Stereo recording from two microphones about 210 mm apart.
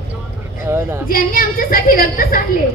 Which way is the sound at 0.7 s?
10° right (ahead or behind).